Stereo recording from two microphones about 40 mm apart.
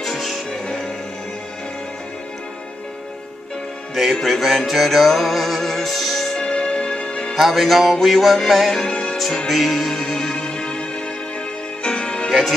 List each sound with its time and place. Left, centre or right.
0.0 s music: centre
0.5 s music: centre
3.9 s music: centre
6.3 s music: left
7.3 s music: centre
8.8 s music: left
9.5 s music: centre; by 12.3 s left
12.3 s music: centre